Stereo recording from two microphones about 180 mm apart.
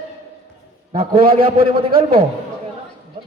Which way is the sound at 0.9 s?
35° right (ahead or behind).